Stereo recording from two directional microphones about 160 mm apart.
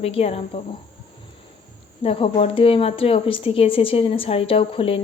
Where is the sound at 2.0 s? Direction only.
35° left (ahead or behind).